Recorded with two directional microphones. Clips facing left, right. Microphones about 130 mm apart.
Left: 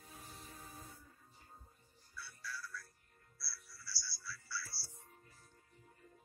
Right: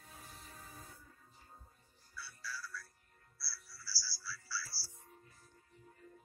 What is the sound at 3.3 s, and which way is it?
Music, 25° left (ahead or behind).